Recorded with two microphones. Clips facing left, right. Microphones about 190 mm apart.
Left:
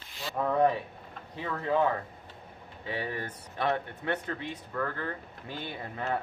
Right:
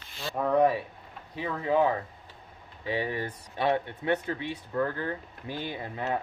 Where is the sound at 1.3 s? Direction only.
15° right (ahead or behind).